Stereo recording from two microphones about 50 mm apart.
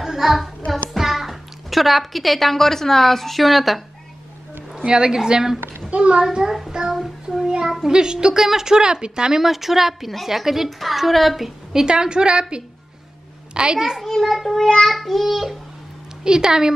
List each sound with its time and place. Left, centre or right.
0.0 s music: centre
0.9 s a child's voice: centre
4.7 s speech: centre
5.9 s a child's voice: right
6.2 s speech: centre
6.9 s child singing: centre
7.4 s speech: centre
9.4 s a woman's voice: centre
11.8 s a woman's voice: centre
14.0 s a child's voice: centre
16.3 s speech: centre